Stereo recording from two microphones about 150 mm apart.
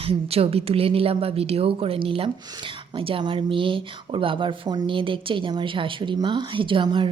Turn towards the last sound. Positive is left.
turn(degrees=-35)  # may be behind; listen again after turning